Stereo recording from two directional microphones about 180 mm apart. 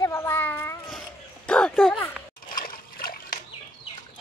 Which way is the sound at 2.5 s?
50° left (ahead or behind).